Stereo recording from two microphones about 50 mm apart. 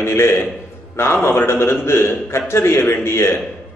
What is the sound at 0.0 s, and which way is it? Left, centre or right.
A man's voice, left.